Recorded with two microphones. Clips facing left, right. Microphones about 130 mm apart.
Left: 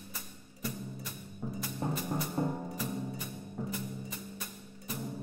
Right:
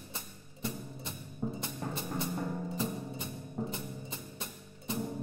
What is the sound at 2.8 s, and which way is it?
Music, 25° right (ahead or behind).